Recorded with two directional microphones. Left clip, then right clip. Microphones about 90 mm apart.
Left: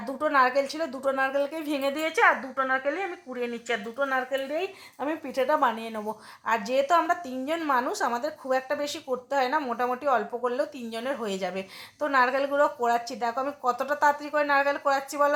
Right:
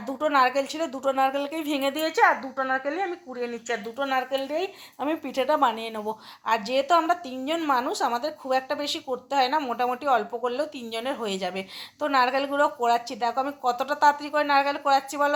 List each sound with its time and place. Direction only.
0.0 s a woman's voice: 25° right (ahead or behind)